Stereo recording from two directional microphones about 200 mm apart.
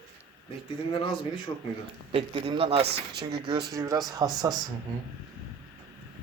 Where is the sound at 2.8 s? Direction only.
55° right (ahead or behind).